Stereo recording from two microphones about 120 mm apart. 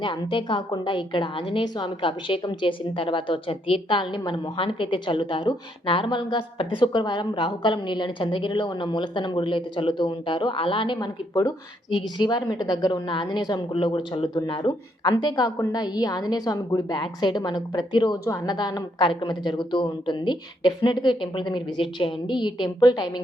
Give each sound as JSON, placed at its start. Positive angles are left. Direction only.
{"t": 0.0, "sound": "a woman's voice", "side_deg": 45}